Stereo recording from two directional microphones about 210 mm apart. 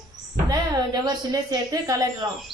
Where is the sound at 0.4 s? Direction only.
15° right (ahead or behind).